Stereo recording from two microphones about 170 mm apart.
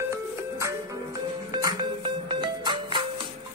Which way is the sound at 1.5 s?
25° right (ahead or behind).